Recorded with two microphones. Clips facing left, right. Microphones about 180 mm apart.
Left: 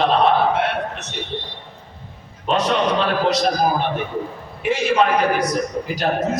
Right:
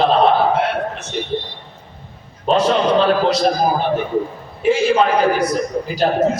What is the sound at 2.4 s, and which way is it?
A man's voice, 30° right (ahead or behind).